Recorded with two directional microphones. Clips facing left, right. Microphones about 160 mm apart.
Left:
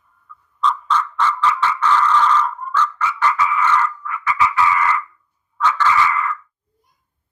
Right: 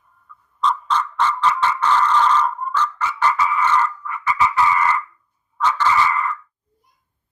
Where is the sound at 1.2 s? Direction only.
35° right (ahead or behind).